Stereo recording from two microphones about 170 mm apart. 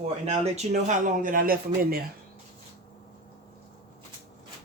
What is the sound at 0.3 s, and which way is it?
Speech, 40° right (ahead or behind).